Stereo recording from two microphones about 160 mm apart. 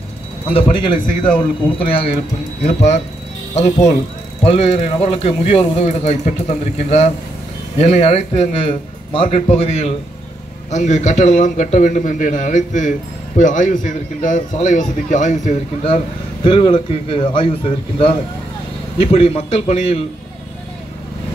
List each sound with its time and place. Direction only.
0.5 s a man's voice: 35° left (ahead or behind)
16.4 s a man's voice: 30° left (ahead or behind)